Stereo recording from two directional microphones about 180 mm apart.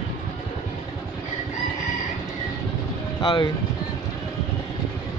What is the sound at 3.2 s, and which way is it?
Speech, 25° left (ahead or behind).